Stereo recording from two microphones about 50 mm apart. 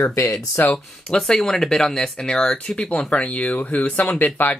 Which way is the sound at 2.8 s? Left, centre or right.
Left.